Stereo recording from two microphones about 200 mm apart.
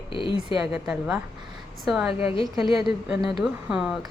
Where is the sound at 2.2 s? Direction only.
25° left (ahead or behind).